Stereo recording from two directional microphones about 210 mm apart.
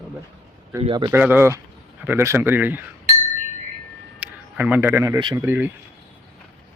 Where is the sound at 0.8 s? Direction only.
20° right (ahead or behind).